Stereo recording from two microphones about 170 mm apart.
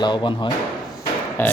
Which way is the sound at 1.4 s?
10° left (ahead or behind).